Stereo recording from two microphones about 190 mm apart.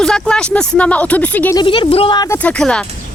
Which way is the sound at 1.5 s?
25° left (ahead or behind).